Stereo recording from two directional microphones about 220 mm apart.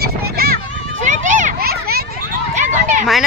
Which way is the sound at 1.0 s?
35° right (ahead or behind).